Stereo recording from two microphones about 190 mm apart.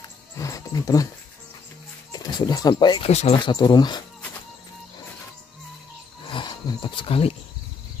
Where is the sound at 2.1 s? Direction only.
20° left (ahead or behind).